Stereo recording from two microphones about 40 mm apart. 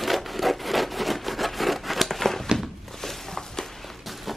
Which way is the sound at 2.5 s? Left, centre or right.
Centre.